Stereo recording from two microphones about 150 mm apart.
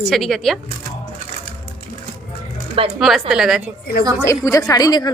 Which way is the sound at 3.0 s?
Centre (ahead or behind).